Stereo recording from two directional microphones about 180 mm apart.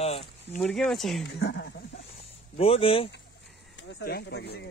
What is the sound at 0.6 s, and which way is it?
Speech, centre (ahead or behind).